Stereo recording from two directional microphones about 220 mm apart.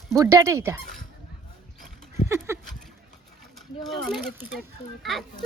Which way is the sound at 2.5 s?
10° right (ahead or behind).